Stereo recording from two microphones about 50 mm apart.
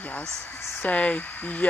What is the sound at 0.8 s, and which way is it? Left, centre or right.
Speech, left.